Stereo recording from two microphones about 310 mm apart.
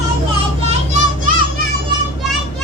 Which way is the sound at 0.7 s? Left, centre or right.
Right.